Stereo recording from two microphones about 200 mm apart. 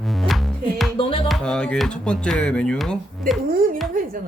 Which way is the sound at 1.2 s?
Centre (ahead or behind).